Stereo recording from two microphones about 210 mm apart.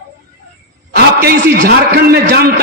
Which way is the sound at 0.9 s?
50° right (ahead or behind).